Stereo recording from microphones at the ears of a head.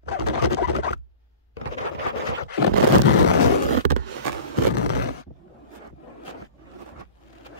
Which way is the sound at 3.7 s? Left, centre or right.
Right.